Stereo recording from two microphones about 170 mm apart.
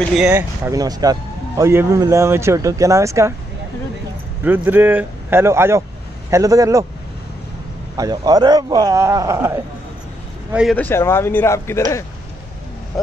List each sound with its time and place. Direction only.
0.3 s a man's voice: 15° right (ahead or behind)
4.5 s a man's voice: 10° right (ahead or behind)
8.0 s a man's voice: 25° right (ahead or behind)
10.5 s speech: 5° right (ahead or behind)
10.8 s speech: 15° left (ahead or behind)
12.9 s speech: centre (ahead or behind)